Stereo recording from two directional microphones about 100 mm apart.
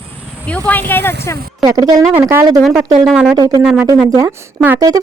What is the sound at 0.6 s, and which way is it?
Speech, 20° left (ahead or behind).